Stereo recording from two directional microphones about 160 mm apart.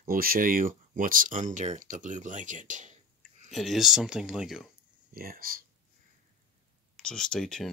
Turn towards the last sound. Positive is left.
turn(degrees=0)  # may be behind; listen again after turning